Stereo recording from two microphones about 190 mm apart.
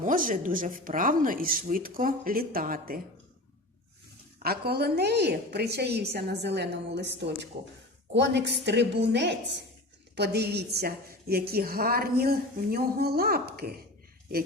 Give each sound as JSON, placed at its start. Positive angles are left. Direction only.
{"t": 0.0, "sound": "a woman's voice", "side_deg": -45}
{"t": 4.4, "sound": "a woman's voice", "side_deg": -55}